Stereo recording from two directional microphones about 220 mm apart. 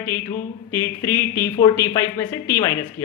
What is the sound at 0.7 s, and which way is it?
Speech, 10° left (ahead or behind).